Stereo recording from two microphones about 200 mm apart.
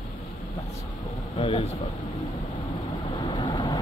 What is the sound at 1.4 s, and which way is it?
Vehicle, 25° left (ahead or behind).